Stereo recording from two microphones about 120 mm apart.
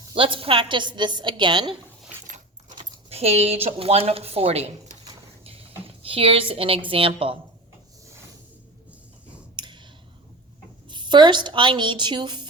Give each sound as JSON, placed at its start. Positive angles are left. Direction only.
{"t": 0.1, "sound": "a woman's voice", "side_deg": -45}
{"t": 2.2, "sound": "keys jangling", "side_deg": -90}
{"t": 3.1, "sound": "speech", "side_deg": -60}
{"t": 9.6, "sound": "clicking", "side_deg": -40}
{"t": 10.8, "sound": "a woman's voice", "side_deg": -40}